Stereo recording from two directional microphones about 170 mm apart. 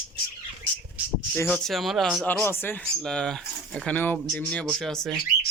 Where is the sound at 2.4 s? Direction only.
10° left (ahead or behind).